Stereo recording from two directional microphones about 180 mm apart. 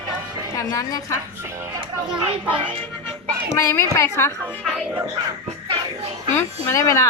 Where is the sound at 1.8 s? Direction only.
30° right (ahead or behind).